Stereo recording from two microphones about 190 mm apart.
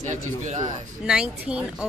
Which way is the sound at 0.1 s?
40° right (ahead or behind).